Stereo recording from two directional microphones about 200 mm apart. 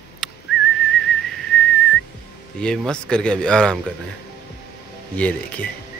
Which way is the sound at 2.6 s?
5° left (ahead or behind).